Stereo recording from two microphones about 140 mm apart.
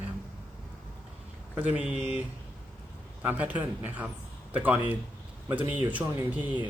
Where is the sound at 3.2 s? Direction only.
10° right (ahead or behind).